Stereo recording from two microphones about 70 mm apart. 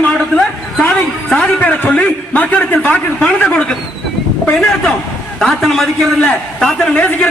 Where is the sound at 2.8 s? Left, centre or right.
Left.